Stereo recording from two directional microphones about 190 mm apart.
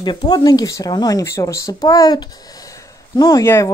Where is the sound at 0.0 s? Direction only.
20° left (ahead or behind).